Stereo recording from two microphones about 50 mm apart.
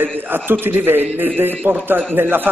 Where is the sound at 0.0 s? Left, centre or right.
Right.